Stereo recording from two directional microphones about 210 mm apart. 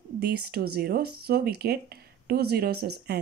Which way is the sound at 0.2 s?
50° right (ahead or behind).